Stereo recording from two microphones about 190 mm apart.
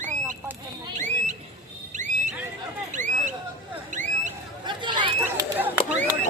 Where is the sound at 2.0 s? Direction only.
40° right (ahead or behind).